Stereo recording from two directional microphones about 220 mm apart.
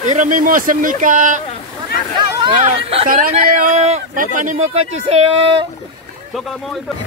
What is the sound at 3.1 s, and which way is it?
Speech, 40° right (ahead or behind).